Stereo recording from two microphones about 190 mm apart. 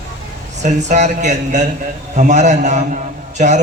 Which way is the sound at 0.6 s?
40° right (ahead or behind).